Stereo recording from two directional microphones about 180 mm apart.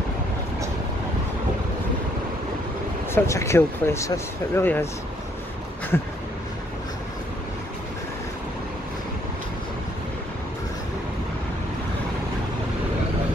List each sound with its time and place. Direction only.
3.1 s speech: 15° left (ahead or behind)
5.9 s speech: 10° left (ahead or behind)